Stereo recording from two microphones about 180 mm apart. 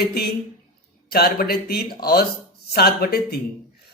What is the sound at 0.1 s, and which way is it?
Speech, 60° left (ahead or behind).